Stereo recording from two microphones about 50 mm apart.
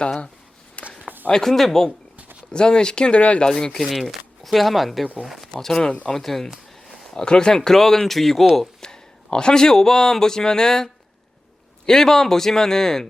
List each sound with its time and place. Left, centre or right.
0.0 s speech: left
0.8 s a sound: left
1.3 s speech: centre
2.5 s speech: centre
3.8 s speech: centre
5.5 s speech: centre
5.9 s speech: left
6.1 s speech: centre
6.8 s a sound: centre
7.2 s speech: centre
11.9 s speech: centre